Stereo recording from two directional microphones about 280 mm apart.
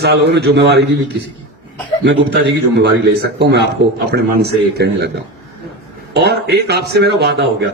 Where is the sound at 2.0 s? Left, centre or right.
Right.